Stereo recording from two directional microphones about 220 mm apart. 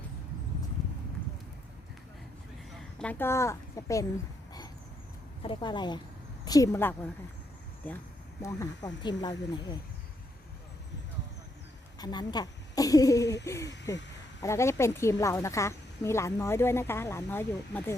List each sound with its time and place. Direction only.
2.7 s a woman's voice: 5° left (ahead or behind)
5.4 s a woman's voice: 20° left (ahead or behind)
8.4 s speech: 15° left (ahead or behind)
11.9 s speech: 20° left (ahead or behind)